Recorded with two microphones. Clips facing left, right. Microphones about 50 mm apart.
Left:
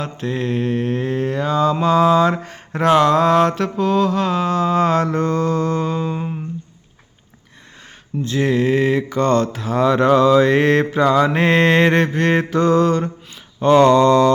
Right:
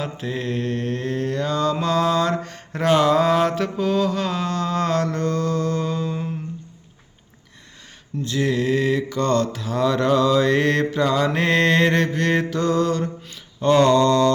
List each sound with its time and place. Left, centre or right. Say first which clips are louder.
0.0 s mantra: left 4 dB; centre
2.7 s mantra: left 3 dB; centre; by 6.3 s left
8.2 s mantra: left 4 dB; left